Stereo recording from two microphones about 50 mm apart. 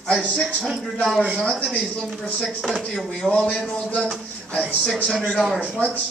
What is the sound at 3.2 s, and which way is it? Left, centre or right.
Speech, right.